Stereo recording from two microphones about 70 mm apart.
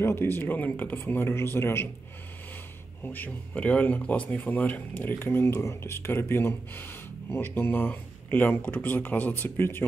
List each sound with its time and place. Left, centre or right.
0.0 s speech: left
3.0 s speech: left
5.2 s speech: left